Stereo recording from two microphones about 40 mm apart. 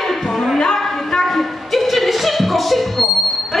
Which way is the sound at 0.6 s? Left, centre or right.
Centre.